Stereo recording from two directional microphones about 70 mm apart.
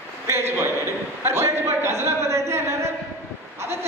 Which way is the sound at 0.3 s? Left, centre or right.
Right.